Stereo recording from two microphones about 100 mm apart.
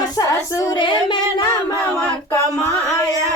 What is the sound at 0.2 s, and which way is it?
Female singing, 35° left (ahead or behind).